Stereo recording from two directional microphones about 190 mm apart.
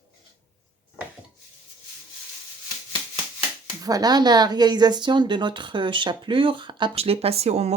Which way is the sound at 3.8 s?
20° right (ahead or behind).